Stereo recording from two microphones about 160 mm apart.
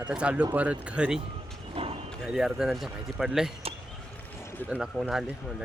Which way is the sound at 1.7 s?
35° right (ahead or behind).